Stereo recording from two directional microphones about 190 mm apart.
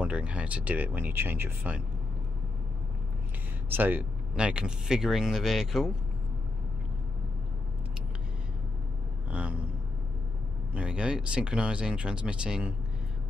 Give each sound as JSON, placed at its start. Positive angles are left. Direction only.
{"t": 0.0, "sound": "speech", "side_deg": -5}
{"t": 3.7, "sound": "speech", "side_deg": -10}
{"t": 9.3, "sound": "a sound", "side_deg": -5}
{"t": 10.7, "sound": "speech", "side_deg": -5}